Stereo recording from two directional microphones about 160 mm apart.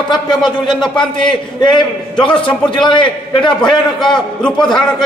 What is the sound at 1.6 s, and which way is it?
A man's voice, 30° left (ahead or behind).